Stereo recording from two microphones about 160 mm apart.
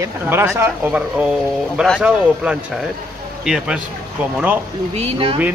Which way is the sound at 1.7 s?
5° left (ahead or behind).